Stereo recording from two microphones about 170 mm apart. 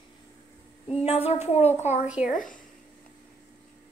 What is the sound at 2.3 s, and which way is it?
Speech, 50° left (ahead or behind).